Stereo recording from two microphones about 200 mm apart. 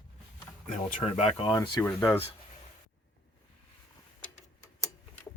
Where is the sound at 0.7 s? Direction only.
40° left (ahead or behind); by 2.1 s 15° left (ahead or behind).